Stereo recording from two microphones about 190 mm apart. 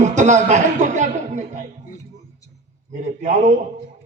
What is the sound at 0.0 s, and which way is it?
Chuckle, 40° right (ahead or behind).